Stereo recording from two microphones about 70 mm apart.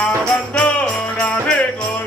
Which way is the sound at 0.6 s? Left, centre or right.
Centre.